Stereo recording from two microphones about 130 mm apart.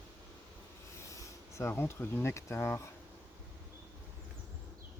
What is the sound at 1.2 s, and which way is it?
Speech, 20° left (ahead or behind).